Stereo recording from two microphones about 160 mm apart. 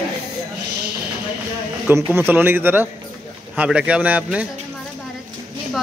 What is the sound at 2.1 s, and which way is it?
A man's voice, 15° right (ahead or behind).